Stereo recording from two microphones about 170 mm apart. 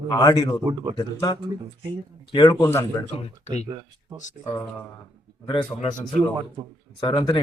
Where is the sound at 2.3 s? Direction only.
25° left (ahead or behind).